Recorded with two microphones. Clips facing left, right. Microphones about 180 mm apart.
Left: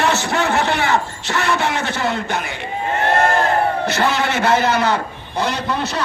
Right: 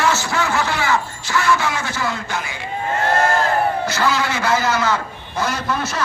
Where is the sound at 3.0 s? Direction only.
20° left (ahead or behind).